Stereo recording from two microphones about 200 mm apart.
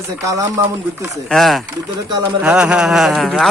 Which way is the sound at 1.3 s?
Centre (ahead or behind).